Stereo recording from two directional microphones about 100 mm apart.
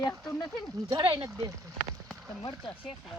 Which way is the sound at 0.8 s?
35° right (ahead or behind).